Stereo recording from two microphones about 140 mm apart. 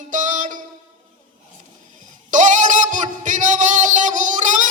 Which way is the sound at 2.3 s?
65° right (ahead or behind).